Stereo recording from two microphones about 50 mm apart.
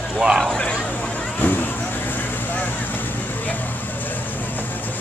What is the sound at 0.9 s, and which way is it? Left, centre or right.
Vehicle, left.